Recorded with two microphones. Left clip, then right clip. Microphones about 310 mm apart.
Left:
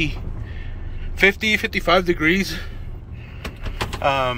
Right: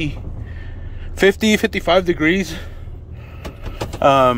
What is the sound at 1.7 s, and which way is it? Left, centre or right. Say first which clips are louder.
Speech: right 2 dB; centre.